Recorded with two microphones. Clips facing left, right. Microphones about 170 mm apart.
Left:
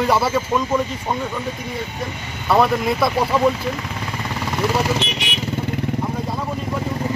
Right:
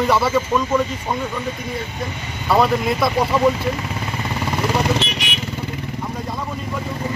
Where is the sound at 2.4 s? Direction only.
Centre (ahead or behind).